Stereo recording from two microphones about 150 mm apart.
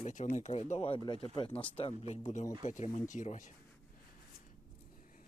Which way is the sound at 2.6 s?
55° left (ahead or behind).